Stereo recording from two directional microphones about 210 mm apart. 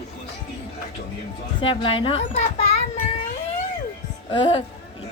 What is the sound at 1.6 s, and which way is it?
Speech, 25° left (ahead or behind).